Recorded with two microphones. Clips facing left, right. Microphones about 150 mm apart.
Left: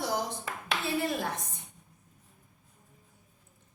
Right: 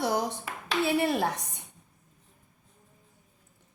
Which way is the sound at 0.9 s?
70° right (ahead or behind).